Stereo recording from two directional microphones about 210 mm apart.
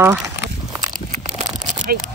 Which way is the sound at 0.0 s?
10° right (ahead or behind).